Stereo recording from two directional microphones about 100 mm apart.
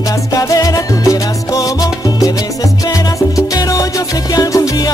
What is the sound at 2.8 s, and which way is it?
Music, 35° left (ahead or behind).